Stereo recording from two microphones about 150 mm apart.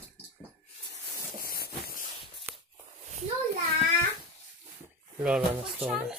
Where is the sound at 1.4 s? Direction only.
85° left.